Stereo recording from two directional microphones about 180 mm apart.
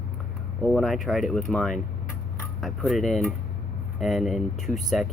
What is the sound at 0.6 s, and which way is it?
Speech, centre (ahead or behind).